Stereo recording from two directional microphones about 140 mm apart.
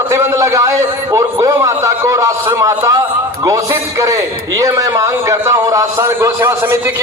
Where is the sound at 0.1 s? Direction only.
20° right (ahead or behind).